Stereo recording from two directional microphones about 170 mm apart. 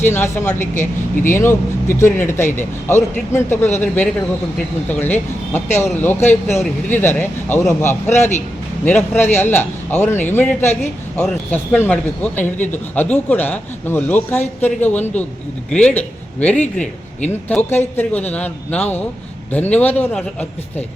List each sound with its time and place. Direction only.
0.0 s speech: 15° left (ahead or behind)